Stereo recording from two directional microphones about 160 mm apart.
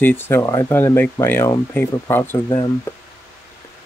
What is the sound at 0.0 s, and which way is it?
Speech, 15° left (ahead or behind).